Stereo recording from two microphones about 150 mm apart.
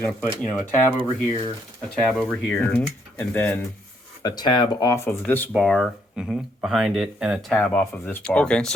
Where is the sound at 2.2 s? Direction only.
5° left (ahead or behind).